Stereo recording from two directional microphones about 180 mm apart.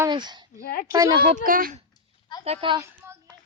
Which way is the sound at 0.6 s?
55° left (ahead or behind).